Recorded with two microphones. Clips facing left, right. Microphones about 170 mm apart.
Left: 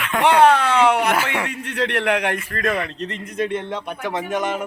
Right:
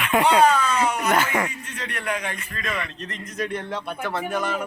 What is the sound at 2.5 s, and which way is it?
Speech, 50° left (ahead or behind).